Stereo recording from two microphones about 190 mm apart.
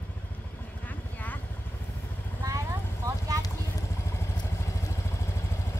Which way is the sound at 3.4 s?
15° left (ahead or behind).